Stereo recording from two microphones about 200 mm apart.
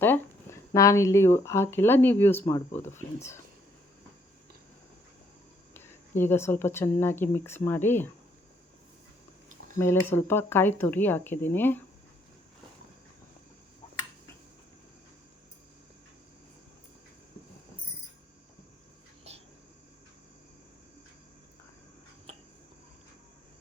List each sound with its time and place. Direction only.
0.7 s speech: 15° left (ahead or behind)
5.7 s speech: 10° left (ahead or behind)
9.7 s speech: 10° left (ahead or behind)
19.3 s a sound: 30° right (ahead or behind)